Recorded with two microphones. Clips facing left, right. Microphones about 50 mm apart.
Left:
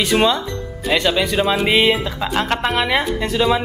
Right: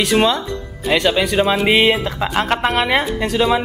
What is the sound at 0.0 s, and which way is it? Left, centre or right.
Speech, centre.